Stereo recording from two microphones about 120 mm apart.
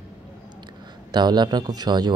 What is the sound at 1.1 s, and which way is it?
Speech, 35° right (ahead or behind).